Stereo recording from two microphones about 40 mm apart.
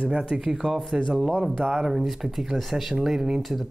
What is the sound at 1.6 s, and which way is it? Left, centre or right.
Speech, centre.